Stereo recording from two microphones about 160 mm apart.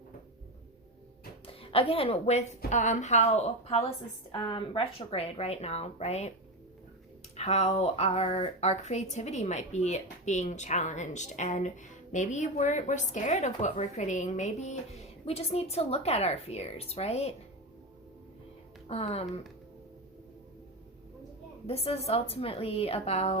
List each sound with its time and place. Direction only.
1.5 s a woman's voice: 35° left (ahead or behind)
7.3 s speech: 40° left (ahead or behind)
18.9 s speech: 40° left (ahead or behind)
21.7 s speech: 40° left (ahead or behind)